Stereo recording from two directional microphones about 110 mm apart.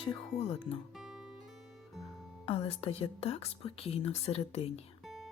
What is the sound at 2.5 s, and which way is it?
Speech, 60° left (ahead or behind).